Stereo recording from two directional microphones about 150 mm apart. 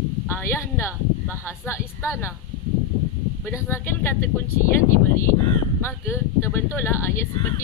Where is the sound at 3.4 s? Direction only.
15° left (ahead or behind).